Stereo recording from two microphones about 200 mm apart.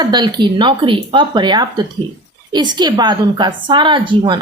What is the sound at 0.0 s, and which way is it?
A woman's voice, 20° right (ahead or behind).